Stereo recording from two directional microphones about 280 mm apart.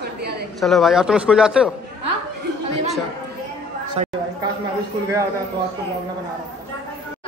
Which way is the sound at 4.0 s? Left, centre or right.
Right.